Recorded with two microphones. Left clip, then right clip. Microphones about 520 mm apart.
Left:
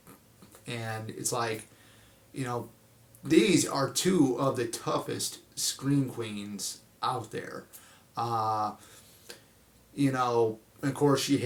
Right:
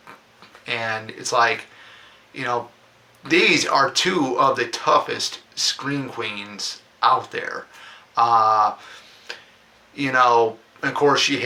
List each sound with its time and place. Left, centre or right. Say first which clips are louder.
0.6 s speech: right 13 dB; left